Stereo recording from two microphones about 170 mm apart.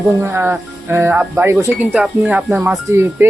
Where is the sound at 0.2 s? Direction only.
15° right (ahead or behind).